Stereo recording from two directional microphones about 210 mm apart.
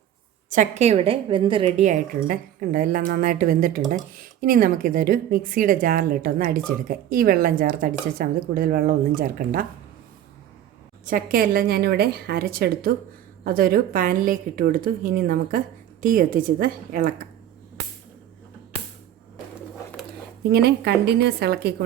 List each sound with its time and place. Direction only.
0.5 s a woman's voice: 35° right (ahead or behind)
11.0 s a woman's voice: 40° right (ahead or behind)
20.5 s speech: 50° right (ahead or behind)